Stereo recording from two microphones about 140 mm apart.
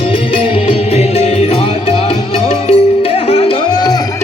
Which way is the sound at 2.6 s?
45° left (ahead or behind).